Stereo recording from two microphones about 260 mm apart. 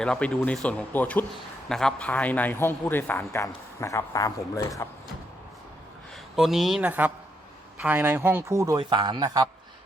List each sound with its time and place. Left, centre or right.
0.0 s a man's voice: centre
6.3 s speech: centre